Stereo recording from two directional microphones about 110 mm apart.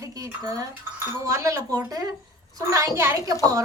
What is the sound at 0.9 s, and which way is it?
A woman's voice, 25° right (ahead or behind).